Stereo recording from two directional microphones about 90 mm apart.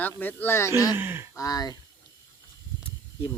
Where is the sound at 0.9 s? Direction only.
25° right (ahead or behind).